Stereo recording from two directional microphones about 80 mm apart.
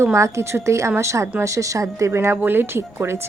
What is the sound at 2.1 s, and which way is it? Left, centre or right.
Speech, right.